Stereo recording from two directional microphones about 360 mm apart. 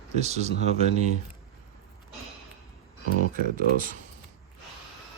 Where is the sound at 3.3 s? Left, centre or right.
Right.